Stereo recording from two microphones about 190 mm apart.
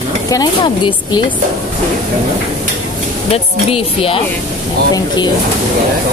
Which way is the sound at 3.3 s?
30° left (ahead or behind).